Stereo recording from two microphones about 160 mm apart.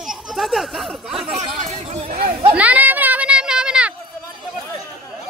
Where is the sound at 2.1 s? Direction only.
60° right (ahead or behind).